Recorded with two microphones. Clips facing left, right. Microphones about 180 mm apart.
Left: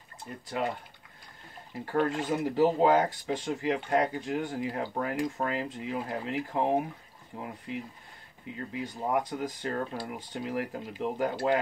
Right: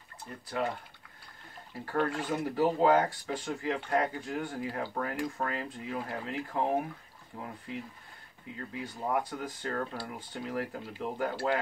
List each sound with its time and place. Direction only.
0.3 s speech: 15° left (ahead or behind)
1.7 s speech: 20° left (ahead or behind)